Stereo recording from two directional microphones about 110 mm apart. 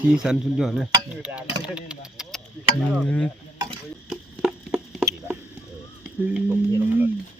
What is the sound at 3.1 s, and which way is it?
Stir, 10° left (ahead or behind).